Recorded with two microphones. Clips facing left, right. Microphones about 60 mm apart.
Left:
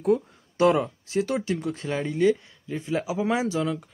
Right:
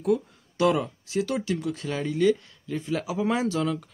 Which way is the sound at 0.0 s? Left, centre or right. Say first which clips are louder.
Left 2 dB; left.